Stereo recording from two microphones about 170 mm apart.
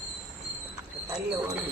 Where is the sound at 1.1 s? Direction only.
10° right (ahead or behind).